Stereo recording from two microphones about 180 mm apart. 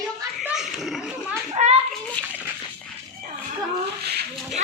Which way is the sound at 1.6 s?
40° right (ahead or behind).